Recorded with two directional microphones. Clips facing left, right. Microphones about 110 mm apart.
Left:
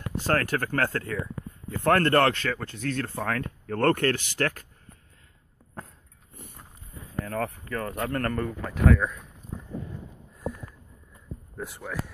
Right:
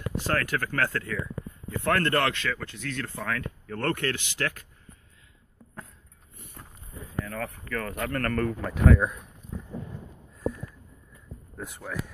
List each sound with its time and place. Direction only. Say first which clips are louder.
0.3 s speech: left 3 dB; 35° left (ahead or behind)
7.2 s speech: left 4 dB; 40° left (ahead or behind)
8.6 s speech: left 1 dB; centre (ahead or behind)
8.9 s speech: right 1 dB; 15° right (ahead or behind)
11.5 s speech: left 1 dB; 5° left (ahead or behind)